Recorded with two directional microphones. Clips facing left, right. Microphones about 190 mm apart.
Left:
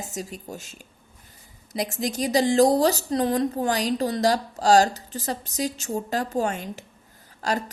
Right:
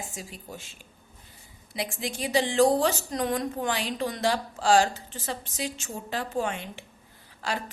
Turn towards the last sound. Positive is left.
turn(degrees=40)  # may be behind; listen again after turning